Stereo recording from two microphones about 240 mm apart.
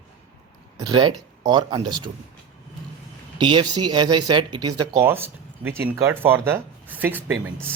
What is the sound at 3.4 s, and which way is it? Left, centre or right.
Speech, centre.